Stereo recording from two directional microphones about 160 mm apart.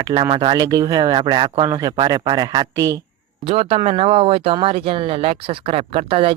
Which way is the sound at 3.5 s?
40° right (ahead or behind).